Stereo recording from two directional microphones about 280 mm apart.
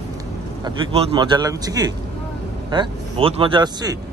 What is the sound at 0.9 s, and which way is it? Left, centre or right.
Speech, centre.